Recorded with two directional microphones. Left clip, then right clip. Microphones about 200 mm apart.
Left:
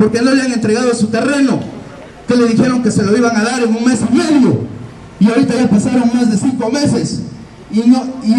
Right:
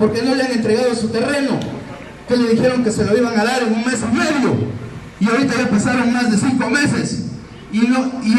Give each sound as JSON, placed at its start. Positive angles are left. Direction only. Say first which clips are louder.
{"t": 0.0, "sound": "a man's voice", "louder": "left 4 dB", "side_deg": 55}
{"t": 5.2, "sound": "a man's voice", "louder": "left 4 dB", "side_deg": 40}